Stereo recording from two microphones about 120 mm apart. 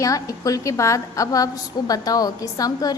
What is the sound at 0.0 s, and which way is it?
A woman's voice, 30° left (ahead or behind).